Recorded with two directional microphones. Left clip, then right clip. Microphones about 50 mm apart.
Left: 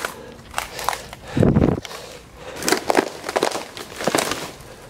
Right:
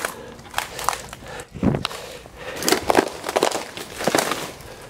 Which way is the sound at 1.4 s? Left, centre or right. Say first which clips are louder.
Left 18 dB; left.